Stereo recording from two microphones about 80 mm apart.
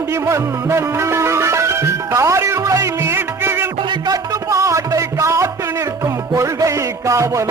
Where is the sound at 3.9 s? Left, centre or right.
Right.